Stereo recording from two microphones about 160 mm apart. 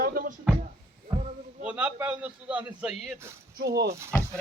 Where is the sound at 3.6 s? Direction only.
90° right.